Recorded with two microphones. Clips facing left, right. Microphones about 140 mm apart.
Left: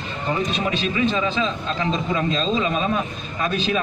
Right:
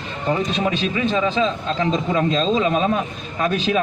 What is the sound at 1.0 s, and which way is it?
A man's voice, 50° right (ahead or behind).